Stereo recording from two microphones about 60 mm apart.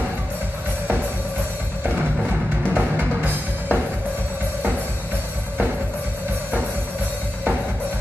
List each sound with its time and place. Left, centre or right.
2.7 s music: right